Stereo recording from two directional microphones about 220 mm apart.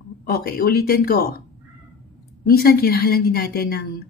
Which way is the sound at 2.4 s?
45° left (ahead or behind).